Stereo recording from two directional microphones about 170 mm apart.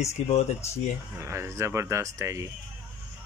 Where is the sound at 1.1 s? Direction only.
15° right (ahead or behind).